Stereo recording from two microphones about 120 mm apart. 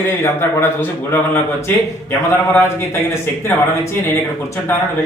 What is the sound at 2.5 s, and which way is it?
Speech, 20° left (ahead or behind).